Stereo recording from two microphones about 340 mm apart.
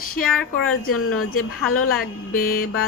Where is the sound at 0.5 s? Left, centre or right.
Left.